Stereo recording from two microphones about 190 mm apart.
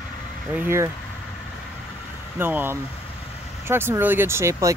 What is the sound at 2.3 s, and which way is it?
Speech, 10° right (ahead or behind).